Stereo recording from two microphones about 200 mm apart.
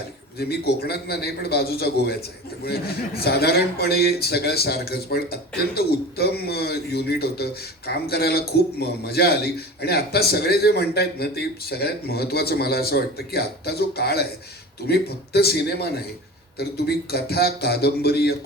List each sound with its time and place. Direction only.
0.3 s a man's voice: 50° left (ahead or behind)
3.2 s a man's voice: 50° left (ahead or behind)